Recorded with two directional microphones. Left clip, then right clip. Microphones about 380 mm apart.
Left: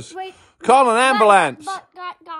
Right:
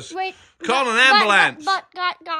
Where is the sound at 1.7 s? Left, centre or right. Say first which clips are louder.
Right 7 dB; centre.